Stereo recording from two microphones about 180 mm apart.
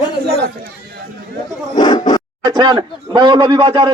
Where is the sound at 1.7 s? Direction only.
25° left (ahead or behind).